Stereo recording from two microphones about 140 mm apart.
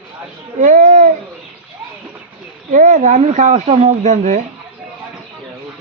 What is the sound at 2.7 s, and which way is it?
Speech, 65° right (ahead or behind).